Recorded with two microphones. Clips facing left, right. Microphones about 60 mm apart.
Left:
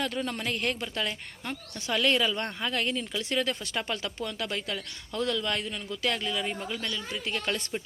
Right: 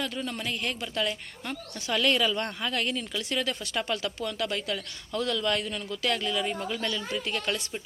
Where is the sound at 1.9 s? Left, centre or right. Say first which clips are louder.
Even; centre.